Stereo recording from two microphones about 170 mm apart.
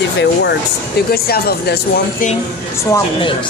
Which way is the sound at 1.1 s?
65° left (ahead or behind).